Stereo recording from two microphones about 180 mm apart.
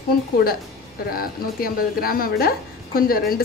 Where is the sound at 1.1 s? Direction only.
55° left (ahead or behind).